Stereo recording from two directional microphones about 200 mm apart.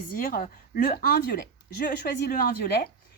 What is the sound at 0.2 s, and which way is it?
Speech, 45° left (ahead or behind).